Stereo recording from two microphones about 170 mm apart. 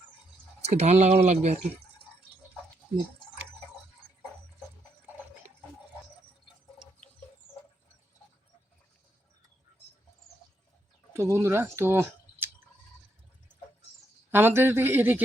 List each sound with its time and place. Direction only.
0.6 s speech: 40° right (ahead or behind)
11.1 s speech: 15° right (ahead or behind)
14.3 s a man's voice: 15° right (ahead or behind)